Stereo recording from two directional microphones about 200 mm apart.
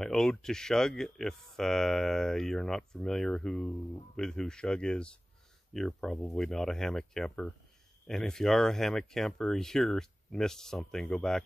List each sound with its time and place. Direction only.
0.0 s speech: centre (ahead or behind)